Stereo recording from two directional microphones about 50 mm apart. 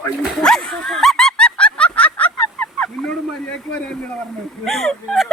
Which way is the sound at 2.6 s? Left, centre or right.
Centre.